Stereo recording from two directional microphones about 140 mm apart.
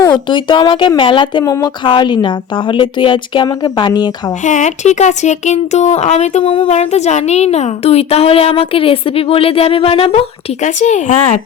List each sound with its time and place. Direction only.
0.0 s a woman's voice: 35° left (ahead or behind)
1.5 s speech: 25° left (ahead or behind)
1.8 s a woman's voice: 35° left (ahead or behind)
4.4 s speech: 60° left (ahead or behind)
6.4 s a woman's voice: 40° left (ahead or behind)
6.7 s speech: 55° left (ahead or behind)
10.6 s speech: 60° left (ahead or behind)